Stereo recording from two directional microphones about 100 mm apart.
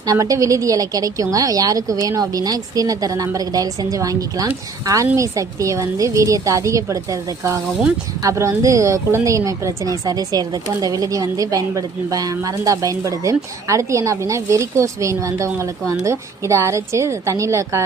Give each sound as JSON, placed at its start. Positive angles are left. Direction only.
{"t": 0.0, "sound": "a woman's voice", "side_deg": -35}